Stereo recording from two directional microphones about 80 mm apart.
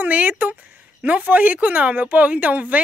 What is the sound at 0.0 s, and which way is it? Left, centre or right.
Speech, centre.